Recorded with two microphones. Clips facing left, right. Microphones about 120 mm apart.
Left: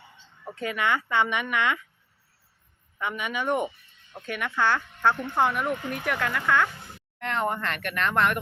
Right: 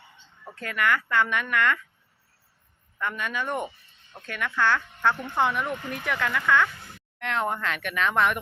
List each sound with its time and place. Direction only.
0.4 s speech: 15° left (ahead or behind)
3.0 s speech: 15° left (ahead or behind); by 8.4 s centre (ahead or behind)